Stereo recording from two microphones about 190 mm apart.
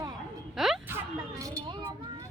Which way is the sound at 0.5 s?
Centre (ahead or behind).